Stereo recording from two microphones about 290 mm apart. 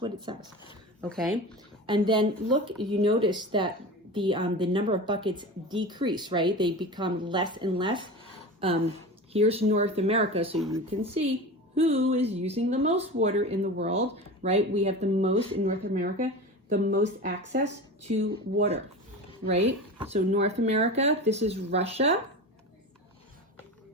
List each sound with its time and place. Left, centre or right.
0.3 s a woman's voice: centre
1.0 s speech: centre
1.9 s a woman's voice: centre; by 18.6 s right
19.5 s speech: right